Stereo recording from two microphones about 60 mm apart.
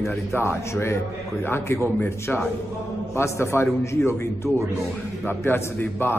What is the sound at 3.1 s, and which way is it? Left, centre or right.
A man's voice, left.